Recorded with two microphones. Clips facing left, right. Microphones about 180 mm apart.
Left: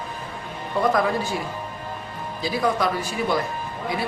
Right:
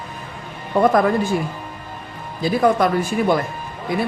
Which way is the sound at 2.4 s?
50° right (ahead or behind).